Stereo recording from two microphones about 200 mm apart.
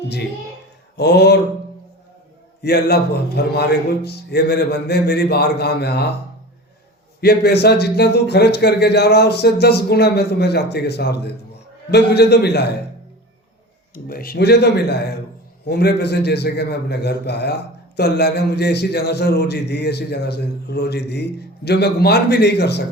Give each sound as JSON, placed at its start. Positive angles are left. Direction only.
{"t": 0.9, "sound": "a man's voice", "side_deg": 55}
{"t": 2.6, "sound": "a man's voice", "side_deg": 55}
{"t": 7.2, "sound": "a man's voice", "side_deg": 50}
{"t": 13.9, "sound": "a man's voice", "side_deg": 45}